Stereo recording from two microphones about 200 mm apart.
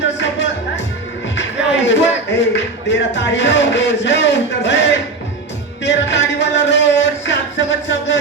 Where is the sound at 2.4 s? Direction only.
60° left (ahead or behind).